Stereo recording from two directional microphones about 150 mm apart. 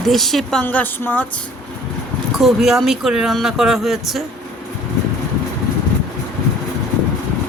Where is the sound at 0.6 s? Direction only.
10° left (ahead or behind).